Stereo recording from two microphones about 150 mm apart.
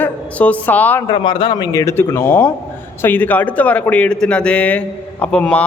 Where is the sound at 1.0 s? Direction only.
30° left (ahead or behind).